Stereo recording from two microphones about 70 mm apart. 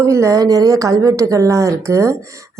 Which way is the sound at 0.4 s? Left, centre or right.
Right.